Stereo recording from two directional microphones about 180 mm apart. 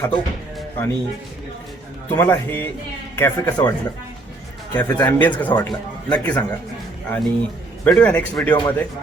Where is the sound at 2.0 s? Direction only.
10° left (ahead or behind).